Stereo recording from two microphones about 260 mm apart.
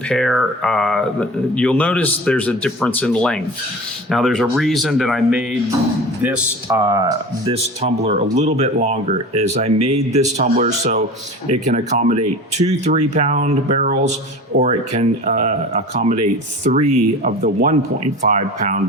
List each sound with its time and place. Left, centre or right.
0.1 s speech: centre; by 18.8 s right